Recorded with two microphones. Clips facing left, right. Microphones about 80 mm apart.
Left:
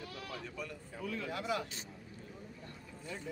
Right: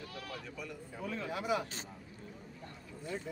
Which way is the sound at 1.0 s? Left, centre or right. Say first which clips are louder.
Right 1 dB; right.